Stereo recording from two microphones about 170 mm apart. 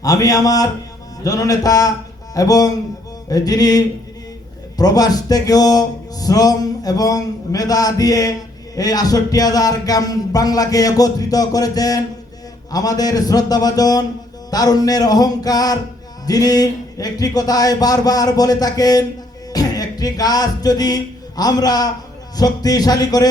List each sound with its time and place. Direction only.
0.0 s speech: 20° left (ahead or behind)